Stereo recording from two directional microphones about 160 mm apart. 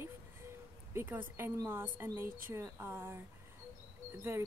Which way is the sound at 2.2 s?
65° right (ahead or behind).